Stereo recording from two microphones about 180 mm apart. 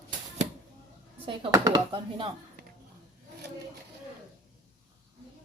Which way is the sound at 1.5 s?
20° right (ahead or behind).